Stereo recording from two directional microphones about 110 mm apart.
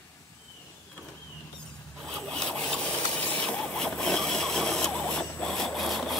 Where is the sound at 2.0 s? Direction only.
Centre (ahead or behind).